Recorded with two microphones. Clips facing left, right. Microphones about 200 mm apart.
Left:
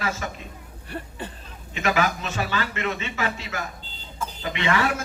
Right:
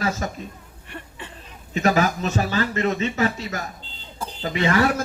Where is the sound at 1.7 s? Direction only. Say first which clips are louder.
Right 4 dB; 40° right (ahead or behind).